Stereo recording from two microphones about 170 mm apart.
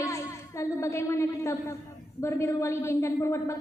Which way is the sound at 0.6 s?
15° left (ahead or behind).